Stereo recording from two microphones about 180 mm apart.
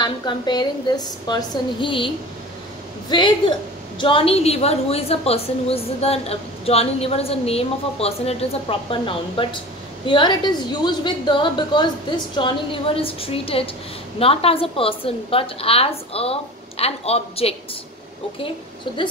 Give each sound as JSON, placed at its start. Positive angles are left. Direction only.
{"t": 0.0, "sound": "a woman's voice", "side_deg": 25}